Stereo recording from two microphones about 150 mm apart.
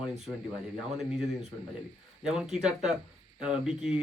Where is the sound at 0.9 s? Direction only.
Centre (ahead or behind).